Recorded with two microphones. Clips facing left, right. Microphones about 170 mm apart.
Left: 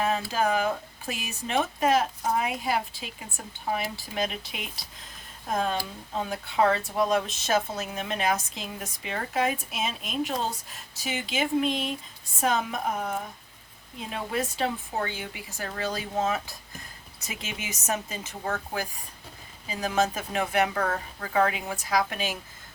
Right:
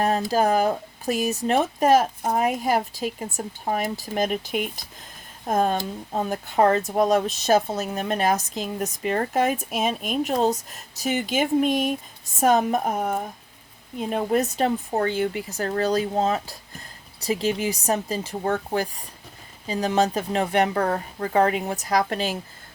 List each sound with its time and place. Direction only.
0.0 s speech: 40° right (ahead or behind)